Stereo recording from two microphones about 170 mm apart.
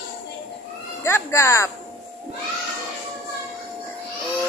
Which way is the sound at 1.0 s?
15° left (ahead or behind).